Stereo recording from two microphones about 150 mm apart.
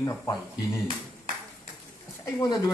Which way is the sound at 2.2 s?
25° left (ahead or behind).